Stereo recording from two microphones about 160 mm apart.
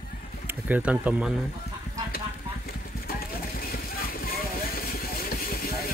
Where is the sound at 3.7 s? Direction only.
70° left (ahead or behind).